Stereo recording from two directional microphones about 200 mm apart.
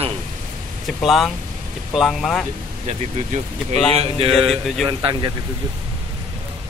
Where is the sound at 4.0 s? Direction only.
30° right (ahead or behind).